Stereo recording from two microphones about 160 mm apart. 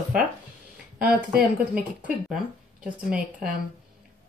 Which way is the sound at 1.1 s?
60° right (ahead or behind).